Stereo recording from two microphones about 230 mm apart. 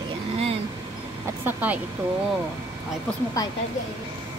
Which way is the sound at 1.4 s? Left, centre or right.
Centre.